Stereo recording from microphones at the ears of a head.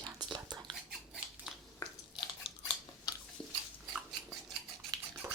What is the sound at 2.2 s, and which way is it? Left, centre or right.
Scissors, left.